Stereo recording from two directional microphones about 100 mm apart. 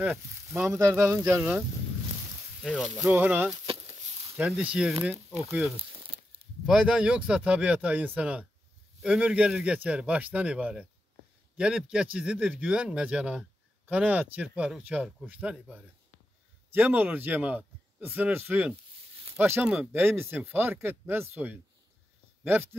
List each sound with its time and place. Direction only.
0.0 s speech: 25° right (ahead or behind)
2.6 s speech: 5° right (ahead or behind)
3.2 s a man's voice: 20° right (ahead or behind)
5.8 s crumpling: 65° right (ahead or behind)
6.6 s a man's voice: 5° right (ahead or behind); by 22.8 s 25° right (ahead or behind)